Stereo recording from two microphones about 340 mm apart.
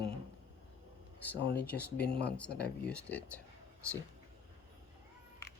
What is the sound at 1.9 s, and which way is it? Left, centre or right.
Speech, left.